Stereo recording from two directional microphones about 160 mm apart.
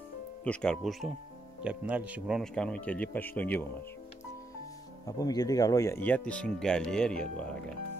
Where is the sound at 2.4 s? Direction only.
5° left (ahead or behind).